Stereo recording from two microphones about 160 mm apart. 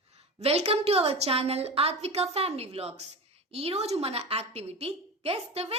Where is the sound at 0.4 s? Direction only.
40° right (ahead or behind).